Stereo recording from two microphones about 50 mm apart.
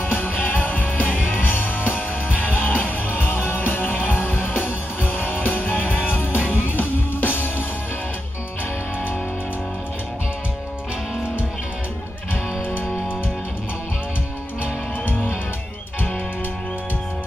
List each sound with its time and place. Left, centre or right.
0.0 s music: left